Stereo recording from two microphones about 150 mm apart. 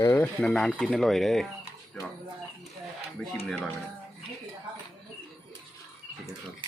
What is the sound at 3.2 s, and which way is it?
Speech, 5° left (ahead or behind).